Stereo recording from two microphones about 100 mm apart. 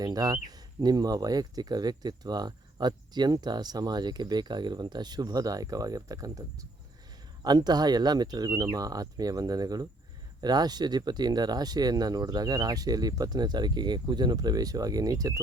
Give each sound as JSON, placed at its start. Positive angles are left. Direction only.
{"t": 0.0, "sound": "speech", "side_deg": -40}